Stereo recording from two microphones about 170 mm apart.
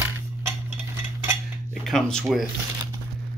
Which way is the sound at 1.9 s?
5° left (ahead or behind).